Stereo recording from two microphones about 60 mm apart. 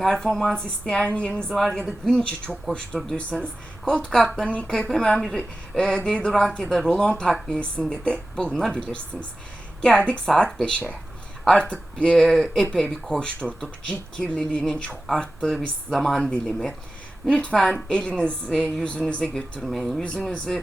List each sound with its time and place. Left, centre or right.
0.0 s a woman's voice: centre
1.5 s a woman's voice: centre
10.0 s a woman's voice: centre
12.1 s a woman's voice: centre
13.1 s a woman's voice: centre